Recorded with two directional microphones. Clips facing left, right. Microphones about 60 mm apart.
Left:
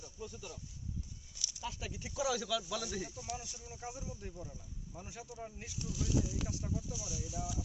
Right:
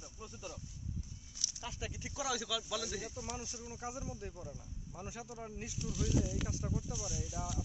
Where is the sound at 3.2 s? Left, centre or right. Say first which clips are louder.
Even; right.